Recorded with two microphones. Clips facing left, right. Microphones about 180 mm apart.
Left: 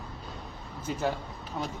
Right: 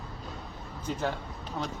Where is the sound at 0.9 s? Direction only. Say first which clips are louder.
Even; 10° left (ahead or behind).